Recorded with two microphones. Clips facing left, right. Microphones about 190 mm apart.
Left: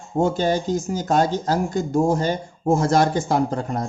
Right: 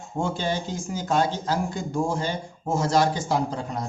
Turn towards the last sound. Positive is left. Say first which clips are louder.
# left 5 dB
turn(degrees=50)  # may be behind; listen again after turning